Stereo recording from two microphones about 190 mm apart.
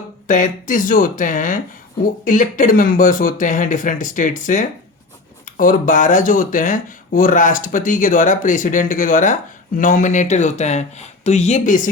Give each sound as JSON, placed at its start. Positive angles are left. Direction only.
{"t": 0.3, "sound": "speech", "side_deg": 45}